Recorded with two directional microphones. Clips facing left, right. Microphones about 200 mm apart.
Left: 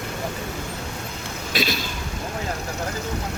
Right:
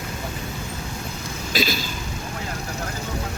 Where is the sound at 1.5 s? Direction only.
Centre (ahead or behind).